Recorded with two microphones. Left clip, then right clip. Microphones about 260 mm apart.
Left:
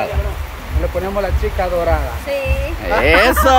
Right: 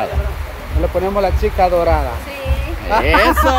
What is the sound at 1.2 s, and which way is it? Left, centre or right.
Speech, right.